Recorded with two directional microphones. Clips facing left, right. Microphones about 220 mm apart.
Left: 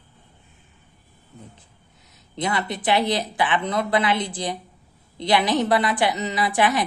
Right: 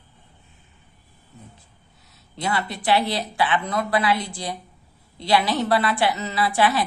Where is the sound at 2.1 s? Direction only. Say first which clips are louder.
Left 1 dB; 20° left (ahead or behind).